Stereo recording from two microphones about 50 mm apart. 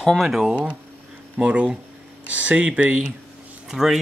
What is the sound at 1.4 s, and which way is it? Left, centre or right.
Speech, right.